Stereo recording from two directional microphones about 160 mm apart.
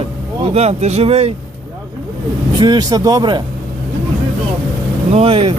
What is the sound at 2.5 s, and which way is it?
Speech, 25° right (ahead or behind).